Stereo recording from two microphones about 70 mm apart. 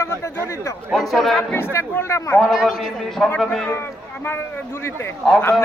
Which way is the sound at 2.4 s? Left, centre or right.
Centre.